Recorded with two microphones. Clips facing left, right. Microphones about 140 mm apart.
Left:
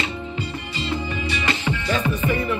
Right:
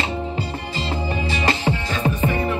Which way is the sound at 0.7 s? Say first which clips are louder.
Right 1 dB; 40° right (ahead or behind).